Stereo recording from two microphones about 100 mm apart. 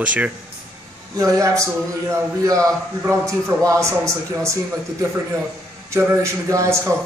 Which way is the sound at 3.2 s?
30° right (ahead or behind).